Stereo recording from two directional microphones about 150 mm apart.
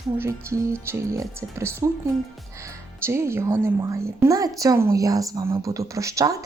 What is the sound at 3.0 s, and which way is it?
A woman's voice, 15° right (ahead or behind).